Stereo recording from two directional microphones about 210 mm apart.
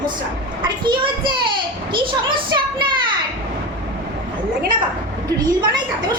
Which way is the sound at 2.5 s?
20° right (ahead or behind).